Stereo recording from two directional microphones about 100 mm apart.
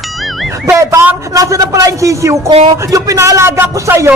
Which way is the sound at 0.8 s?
30° right (ahead or behind).